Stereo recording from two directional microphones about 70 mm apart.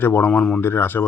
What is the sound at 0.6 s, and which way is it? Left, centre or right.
Speech, left.